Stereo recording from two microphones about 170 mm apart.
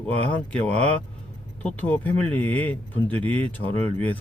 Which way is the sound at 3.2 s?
35° right (ahead or behind).